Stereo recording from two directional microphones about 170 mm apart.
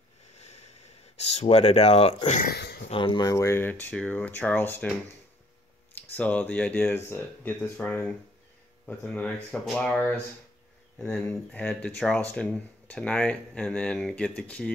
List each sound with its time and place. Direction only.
0.4 s sniff: 40° left (ahead or behind)
1.2 s speech: 40° left (ahead or behind)
2.5 s speech: 70° left (ahead or behind)
2.9 s speech: 30° left (ahead or behind); by 4.9 s 10° left (ahead or behind)
5.9 s speech: 10° left (ahead or behind)
11.0 s speech: 5° left (ahead or behind)